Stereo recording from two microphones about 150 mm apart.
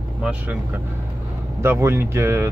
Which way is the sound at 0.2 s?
10° right (ahead or behind).